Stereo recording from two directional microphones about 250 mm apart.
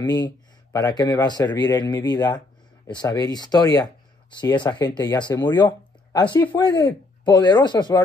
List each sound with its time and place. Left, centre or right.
0.0 s speech: centre